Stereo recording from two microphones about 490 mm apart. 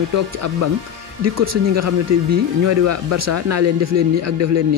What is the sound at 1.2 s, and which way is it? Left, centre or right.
A man's voice, right.